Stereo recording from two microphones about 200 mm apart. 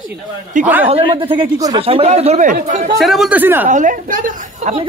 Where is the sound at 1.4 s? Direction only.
25° right (ahead or behind).